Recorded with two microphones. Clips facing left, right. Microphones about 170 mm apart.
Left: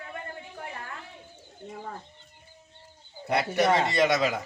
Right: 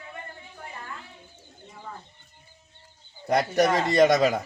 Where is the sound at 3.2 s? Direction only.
40° right (ahead or behind).